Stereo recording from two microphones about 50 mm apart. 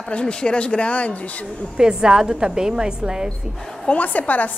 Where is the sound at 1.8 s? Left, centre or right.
Centre.